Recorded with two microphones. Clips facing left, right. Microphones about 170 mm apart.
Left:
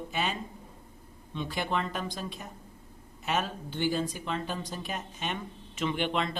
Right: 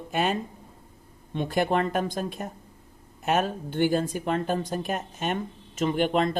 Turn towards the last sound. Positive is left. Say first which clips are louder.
# right 6 dB
turn(degrees=-45)  # may be behind; listen again after turning